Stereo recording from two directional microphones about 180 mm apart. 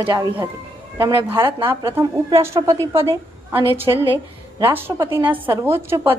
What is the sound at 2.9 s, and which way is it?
A woman's voice, 30° right (ahead or behind).